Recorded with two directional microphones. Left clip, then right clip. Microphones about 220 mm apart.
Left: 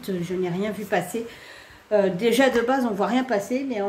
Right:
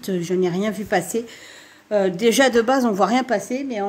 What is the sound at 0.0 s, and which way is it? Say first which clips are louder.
A woman's voice: right 6 dB; 45° right (ahead or behind).